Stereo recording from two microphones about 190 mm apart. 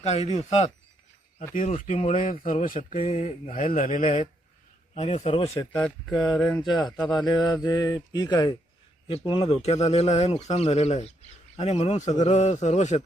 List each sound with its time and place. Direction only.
0.0 s speech: 35° left (ahead or behind)
5.7 s speech: 5° left (ahead or behind)
6.6 s speech: 25° left (ahead or behind)